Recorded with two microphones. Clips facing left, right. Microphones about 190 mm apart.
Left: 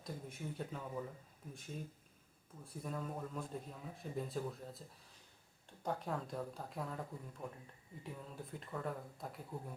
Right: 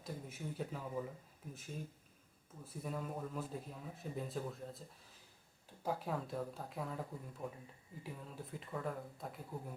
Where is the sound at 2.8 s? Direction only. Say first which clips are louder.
Right 1 dB; 5° right (ahead or behind).